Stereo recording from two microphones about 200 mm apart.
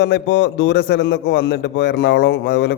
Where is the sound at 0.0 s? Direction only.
55° left (ahead or behind).